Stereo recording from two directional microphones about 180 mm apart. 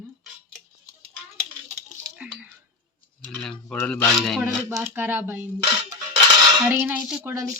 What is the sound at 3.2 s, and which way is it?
A woman's voice, 5° left (ahead or behind).